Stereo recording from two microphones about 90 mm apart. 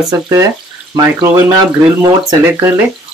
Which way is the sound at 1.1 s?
50° right (ahead or behind).